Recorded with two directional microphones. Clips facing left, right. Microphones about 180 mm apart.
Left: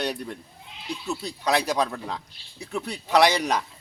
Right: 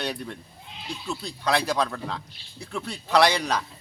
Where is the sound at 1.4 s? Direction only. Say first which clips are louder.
Left 1 dB; 15° left (ahead or behind).